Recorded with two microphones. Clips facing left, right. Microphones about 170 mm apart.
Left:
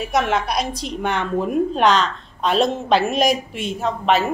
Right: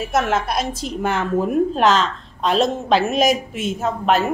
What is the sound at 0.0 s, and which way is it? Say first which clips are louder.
A woman's voice: even; centre (ahead or behind).